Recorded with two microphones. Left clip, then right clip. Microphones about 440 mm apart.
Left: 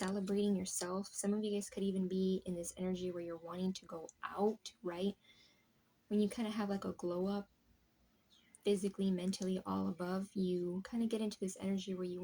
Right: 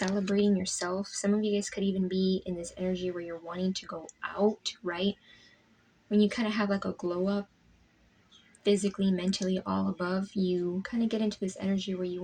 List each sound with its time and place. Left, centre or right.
0.3 s speech: left
8.6 s speech: left